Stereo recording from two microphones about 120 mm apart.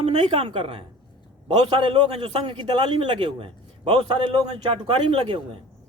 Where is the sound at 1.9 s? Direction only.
45° right (ahead or behind).